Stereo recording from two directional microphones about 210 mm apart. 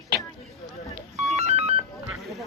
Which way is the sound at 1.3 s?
30° right (ahead or behind).